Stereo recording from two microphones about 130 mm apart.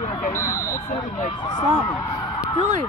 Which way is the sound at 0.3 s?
20° left (ahead or behind).